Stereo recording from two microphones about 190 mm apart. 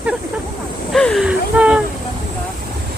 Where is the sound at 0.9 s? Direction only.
Centre (ahead or behind).